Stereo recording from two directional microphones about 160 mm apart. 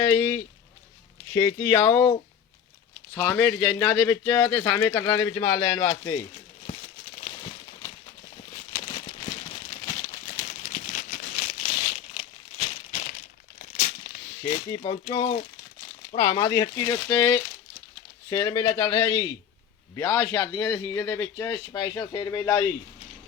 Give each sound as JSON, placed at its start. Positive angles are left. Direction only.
{"t": 0.0, "sound": "speech", "side_deg": 25}
{"t": 3.2, "sound": "speech", "side_deg": 15}
{"t": 7.2, "sound": "a sound", "side_deg": 35}
{"t": 8.7, "sound": "crumpling", "side_deg": 35}
{"t": 10.6, "sound": "crumpling", "side_deg": 40}
{"t": 13.1, "sound": "crumpling", "side_deg": 55}
{"t": 14.0, "sound": "a sound", "side_deg": 55}
{"t": 14.8, "sound": "speech", "side_deg": 30}
{"t": 16.3, "sound": "speech", "side_deg": 25}